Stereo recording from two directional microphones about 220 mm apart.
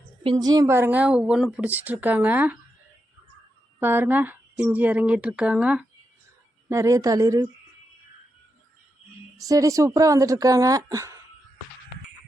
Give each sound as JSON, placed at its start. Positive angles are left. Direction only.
{"t": 0.2, "sound": "speech", "side_deg": -20}
{"t": 3.8, "sound": "speech", "side_deg": -10}
{"t": 9.4, "sound": "speech", "side_deg": -15}